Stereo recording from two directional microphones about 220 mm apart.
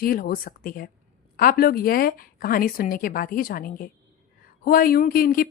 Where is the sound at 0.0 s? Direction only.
40° left (ahead or behind).